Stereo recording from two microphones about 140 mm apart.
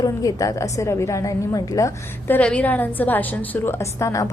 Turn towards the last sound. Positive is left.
turn(degrees=20)  # may be behind; listen again after turning